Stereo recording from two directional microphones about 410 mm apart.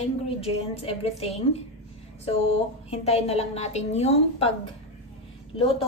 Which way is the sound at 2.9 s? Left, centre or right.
Centre.